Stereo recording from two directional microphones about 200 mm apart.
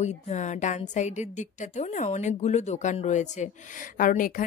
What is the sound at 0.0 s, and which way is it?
A woman's voice, 35° left (ahead or behind).